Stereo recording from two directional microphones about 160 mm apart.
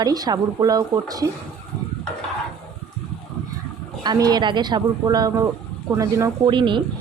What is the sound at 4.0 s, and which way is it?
Speech, 25° right (ahead or behind).